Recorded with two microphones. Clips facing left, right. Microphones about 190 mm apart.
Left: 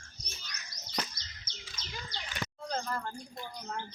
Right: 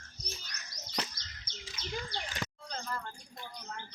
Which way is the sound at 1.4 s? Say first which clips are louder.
Right 5 dB; 60° right (ahead or behind).